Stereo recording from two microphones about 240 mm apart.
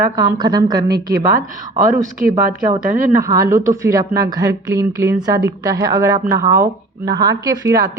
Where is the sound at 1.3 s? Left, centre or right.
Right.